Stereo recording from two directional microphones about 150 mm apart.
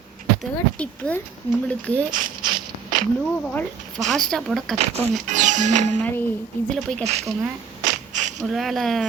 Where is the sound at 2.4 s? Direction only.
30° right (ahead or behind).